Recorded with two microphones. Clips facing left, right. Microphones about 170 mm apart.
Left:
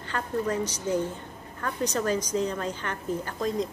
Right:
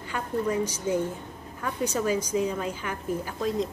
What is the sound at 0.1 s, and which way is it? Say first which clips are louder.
A woman's voice: right 1 dB; 10° right (ahead or behind).